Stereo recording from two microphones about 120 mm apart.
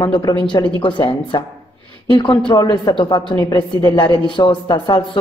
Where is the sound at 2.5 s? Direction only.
35° left (ahead or behind).